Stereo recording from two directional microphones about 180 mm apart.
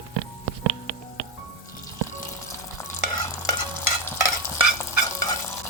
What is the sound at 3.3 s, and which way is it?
Stir, 15° left (ahead or behind).